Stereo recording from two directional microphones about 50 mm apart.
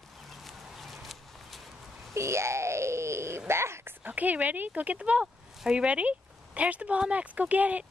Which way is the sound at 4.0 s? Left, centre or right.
Right.